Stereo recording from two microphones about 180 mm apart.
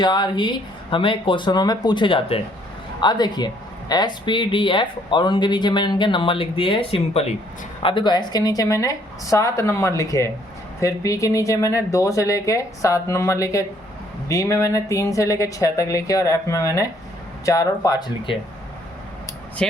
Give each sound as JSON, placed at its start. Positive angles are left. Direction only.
{"t": 0.0, "sound": "speech", "side_deg": 25}